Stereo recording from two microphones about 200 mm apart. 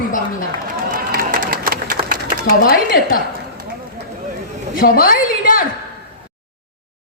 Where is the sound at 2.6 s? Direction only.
50° left (ahead or behind).